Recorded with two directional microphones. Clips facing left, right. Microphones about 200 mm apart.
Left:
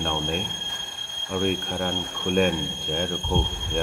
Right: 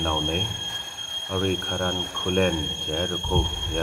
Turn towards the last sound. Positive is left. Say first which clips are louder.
# even
turn(degrees=5)  # may be behind; listen again after turning